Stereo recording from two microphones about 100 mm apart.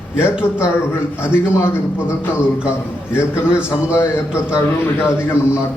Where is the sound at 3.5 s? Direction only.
10° right (ahead or behind).